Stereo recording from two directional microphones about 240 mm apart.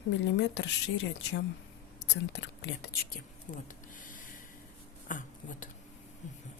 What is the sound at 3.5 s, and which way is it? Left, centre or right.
Speech, left.